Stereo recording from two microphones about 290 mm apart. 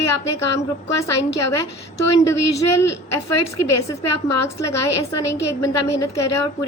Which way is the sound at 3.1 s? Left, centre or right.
Left.